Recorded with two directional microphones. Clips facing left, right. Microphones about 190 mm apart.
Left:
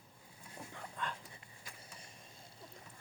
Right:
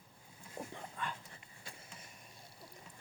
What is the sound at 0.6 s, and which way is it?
Dog, 25° right (ahead or behind).